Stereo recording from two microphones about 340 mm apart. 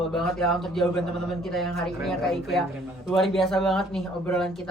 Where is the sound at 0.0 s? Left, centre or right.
Centre.